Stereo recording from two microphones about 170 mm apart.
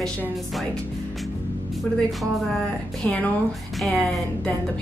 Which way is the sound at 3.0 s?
10° left (ahead or behind).